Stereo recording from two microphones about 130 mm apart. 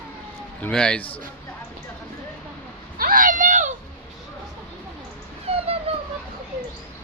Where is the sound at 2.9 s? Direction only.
90° right; by 3.7 s 75° right (ahead or behind).